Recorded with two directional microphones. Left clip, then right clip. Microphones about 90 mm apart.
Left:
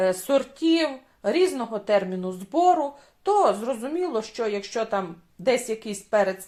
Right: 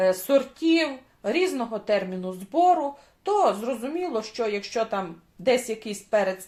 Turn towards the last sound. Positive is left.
turn(degrees=25)  # may be behind; listen again after turning